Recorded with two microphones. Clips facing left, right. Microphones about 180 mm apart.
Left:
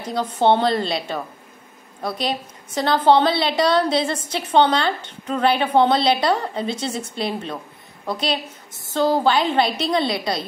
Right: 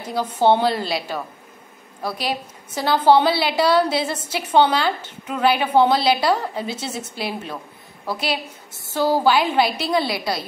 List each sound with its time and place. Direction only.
0.0 s a woman's voice: 10° right (ahead or behind)